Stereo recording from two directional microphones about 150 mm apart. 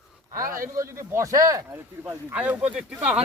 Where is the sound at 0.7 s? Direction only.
20° right (ahead or behind).